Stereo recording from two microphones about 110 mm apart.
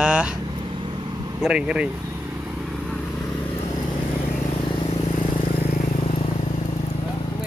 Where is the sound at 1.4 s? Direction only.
10° right (ahead or behind).